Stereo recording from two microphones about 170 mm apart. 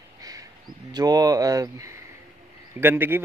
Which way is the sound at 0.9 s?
20° right (ahead or behind).